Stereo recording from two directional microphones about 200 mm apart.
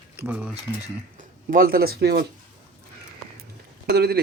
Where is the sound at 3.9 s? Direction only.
55° right (ahead or behind).